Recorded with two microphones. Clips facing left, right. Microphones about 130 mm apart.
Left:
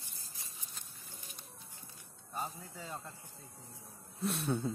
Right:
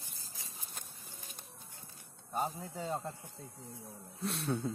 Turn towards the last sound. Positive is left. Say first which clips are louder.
# left 1 dB
turn(degrees=0)  # may be behind; listen again after turning